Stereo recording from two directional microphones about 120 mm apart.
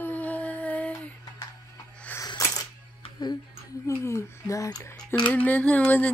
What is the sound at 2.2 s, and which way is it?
Coin, 30° left (ahead or behind).